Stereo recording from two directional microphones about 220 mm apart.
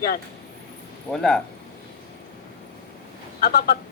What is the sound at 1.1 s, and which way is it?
Speech, 5° left (ahead or behind).